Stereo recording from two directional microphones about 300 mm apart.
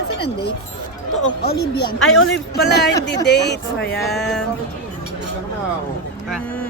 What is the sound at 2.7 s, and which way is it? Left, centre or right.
Speech, left.